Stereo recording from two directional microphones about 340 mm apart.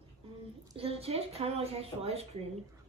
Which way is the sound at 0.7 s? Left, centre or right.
Centre.